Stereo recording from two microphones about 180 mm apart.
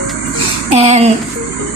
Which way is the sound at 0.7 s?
35° right (ahead or behind).